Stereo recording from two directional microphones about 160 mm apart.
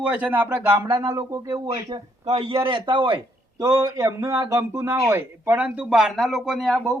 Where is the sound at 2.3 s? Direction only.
35° right (ahead or behind).